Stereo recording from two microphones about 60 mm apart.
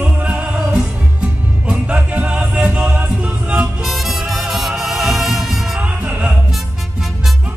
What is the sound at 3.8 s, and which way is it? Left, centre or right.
Music, centre.